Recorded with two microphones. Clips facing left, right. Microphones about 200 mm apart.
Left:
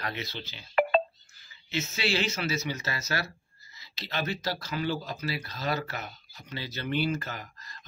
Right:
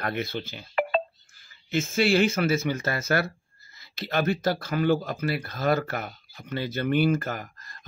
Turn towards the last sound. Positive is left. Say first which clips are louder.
# right 7 dB
turn(degrees=-50)  # may be behind; listen again after turning